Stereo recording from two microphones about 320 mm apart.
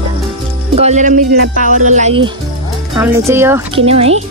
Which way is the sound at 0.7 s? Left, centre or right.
Right.